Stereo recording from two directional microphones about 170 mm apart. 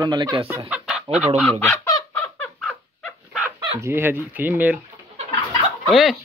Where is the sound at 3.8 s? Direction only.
15° right (ahead or behind).